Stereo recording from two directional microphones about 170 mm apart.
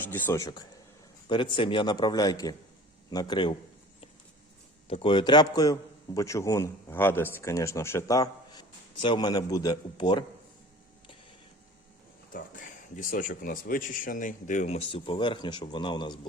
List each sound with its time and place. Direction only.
0.0 s speech: 10° left (ahead or behind)
4.9 s speech: 30° left (ahead or behind)
12.3 s speech: 55° left (ahead or behind); by 16.1 s 25° left (ahead or behind)